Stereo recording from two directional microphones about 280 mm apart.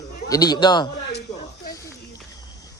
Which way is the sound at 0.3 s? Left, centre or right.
Centre.